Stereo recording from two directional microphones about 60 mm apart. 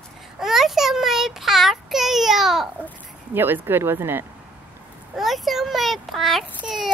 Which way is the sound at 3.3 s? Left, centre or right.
Right.